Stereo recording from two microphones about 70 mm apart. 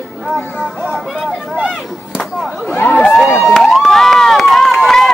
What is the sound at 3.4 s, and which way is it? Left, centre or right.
Crowd, centre.